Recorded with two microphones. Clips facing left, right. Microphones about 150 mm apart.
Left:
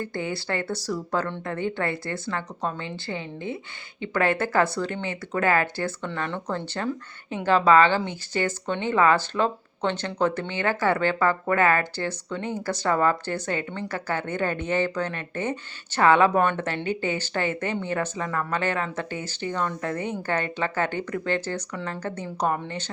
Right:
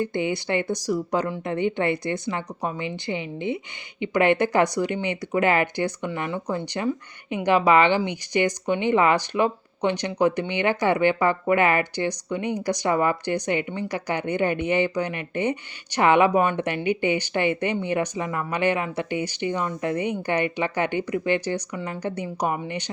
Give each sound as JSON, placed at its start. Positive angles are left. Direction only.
{"t": 0.0, "sound": "speech", "side_deg": -20}